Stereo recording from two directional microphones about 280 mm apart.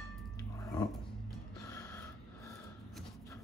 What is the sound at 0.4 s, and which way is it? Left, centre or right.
Dog, centre.